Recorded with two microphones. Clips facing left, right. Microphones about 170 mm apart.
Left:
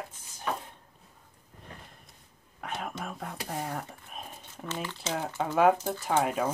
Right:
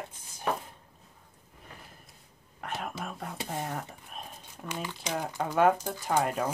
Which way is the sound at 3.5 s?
Centre (ahead or behind).